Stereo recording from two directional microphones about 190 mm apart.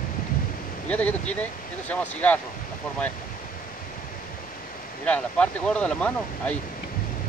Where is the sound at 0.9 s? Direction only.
10° left (ahead or behind).